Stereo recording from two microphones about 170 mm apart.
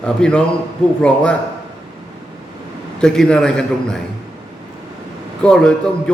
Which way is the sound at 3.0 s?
5° left (ahead or behind).